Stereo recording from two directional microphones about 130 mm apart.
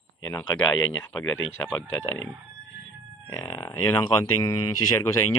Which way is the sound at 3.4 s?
20° left (ahead or behind).